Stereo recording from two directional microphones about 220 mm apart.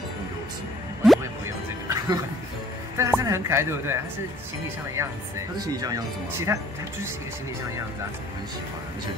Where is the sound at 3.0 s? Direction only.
15° right (ahead or behind).